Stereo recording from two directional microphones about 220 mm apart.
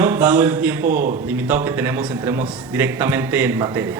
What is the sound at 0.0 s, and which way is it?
A man's voice, 10° right (ahead or behind).